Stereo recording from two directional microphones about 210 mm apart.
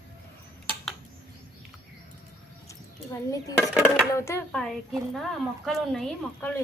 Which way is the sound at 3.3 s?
15° left (ahead or behind).